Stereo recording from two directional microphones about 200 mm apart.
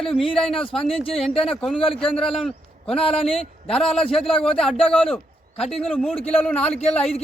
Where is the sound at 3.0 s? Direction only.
30° left (ahead or behind).